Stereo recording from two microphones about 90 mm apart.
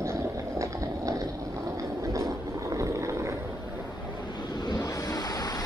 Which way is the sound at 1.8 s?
40° right (ahead or behind).